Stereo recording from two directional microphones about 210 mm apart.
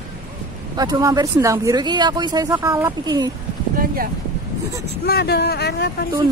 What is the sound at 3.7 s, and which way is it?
Speech, 45° right (ahead or behind).